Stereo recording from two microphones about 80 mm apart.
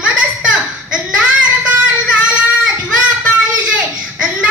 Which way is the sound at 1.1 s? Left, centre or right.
Centre.